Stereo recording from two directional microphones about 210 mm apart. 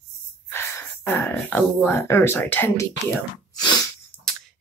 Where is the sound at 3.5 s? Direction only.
20° left (ahead or behind).